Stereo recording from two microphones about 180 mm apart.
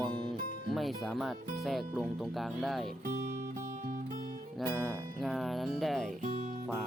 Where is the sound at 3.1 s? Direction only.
45° right (ahead or behind).